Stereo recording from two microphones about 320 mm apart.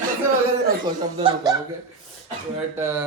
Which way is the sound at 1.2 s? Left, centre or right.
Centre.